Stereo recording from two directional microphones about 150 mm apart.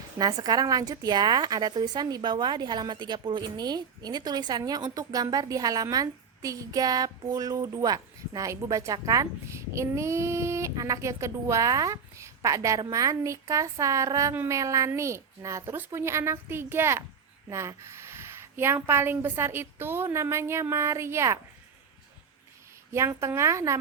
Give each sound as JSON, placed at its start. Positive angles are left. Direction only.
{"t": 0.2, "sound": "a woman's voice", "side_deg": -25}
{"t": 22.9, "sound": "a woman's voice", "side_deg": -20}